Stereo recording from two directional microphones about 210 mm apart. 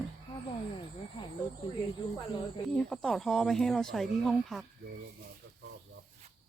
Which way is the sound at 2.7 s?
5° left (ahead or behind).